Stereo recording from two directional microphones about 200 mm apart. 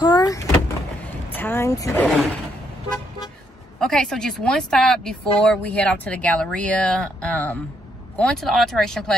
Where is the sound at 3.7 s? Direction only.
Centre (ahead or behind).